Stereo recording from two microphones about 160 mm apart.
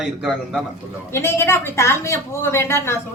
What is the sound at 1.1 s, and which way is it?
Speech, 15° left (ahead or behind).